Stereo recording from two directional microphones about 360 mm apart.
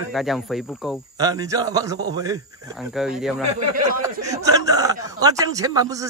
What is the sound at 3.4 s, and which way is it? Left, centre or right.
Speech, centre.